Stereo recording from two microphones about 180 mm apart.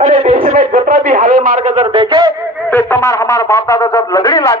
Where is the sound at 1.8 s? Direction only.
25° right (ahead or behind).